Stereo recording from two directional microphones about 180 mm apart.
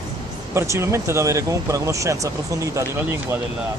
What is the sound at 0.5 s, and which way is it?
Speech, 15° right (ahead or behind).